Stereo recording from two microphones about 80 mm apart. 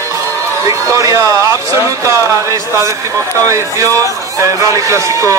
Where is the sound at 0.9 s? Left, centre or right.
Right.